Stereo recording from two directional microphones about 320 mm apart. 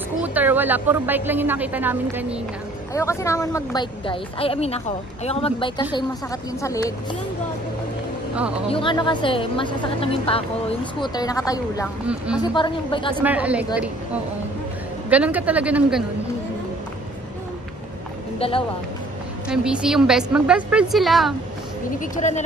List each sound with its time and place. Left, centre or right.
0.2 s speech: centre
2.9 s a woman's voice: centre
8.6 s a woman's voice: centre
13.2 s speech: centre
15.0 s speech: centre
18.4 s a woman's voice: centre
19.5 s speech: centre
22.0 s speech: left